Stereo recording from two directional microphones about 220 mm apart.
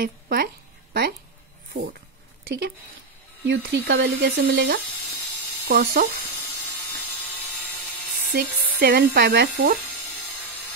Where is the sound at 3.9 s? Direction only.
50° right (ahead or behind).